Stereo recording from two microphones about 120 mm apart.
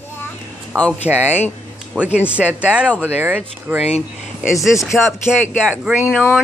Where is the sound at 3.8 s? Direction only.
60° left (ahead or behind).